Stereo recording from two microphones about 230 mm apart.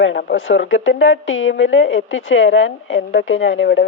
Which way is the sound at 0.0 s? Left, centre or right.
Left.